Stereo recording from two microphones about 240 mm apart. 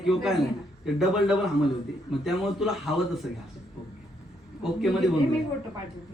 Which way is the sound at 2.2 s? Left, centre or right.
Centre.